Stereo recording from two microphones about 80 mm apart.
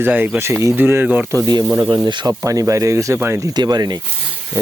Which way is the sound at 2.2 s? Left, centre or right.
Right.